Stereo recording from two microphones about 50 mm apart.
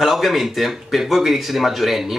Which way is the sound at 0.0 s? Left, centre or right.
Centre.